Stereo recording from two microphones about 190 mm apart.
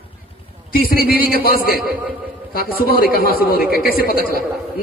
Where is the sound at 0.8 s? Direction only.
50° left (ahead or behind).